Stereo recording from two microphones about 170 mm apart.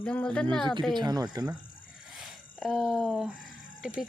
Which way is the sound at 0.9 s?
25° right (ahead or behind).